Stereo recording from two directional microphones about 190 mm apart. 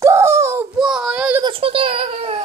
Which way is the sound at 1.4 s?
30° right (ahead or behind).